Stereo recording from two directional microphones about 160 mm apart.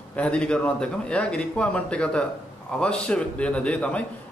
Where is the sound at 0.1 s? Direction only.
5° left (ahead or behind).